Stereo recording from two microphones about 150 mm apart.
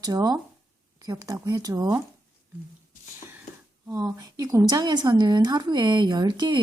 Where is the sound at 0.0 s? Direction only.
25° right (ahead or behind).